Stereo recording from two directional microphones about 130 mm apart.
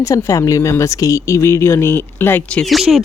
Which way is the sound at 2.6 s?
Centre (ahead or behind).